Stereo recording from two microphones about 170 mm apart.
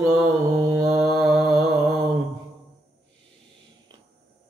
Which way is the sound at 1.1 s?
5° right (ahead or behind).